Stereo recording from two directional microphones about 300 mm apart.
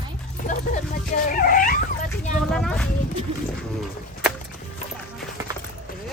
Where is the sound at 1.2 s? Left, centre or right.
Left.